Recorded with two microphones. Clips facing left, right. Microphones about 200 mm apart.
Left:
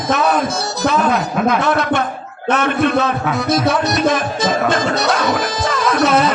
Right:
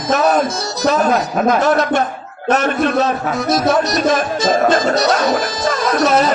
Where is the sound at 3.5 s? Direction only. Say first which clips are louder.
Right 2 dB; 55° left (ahead or behind).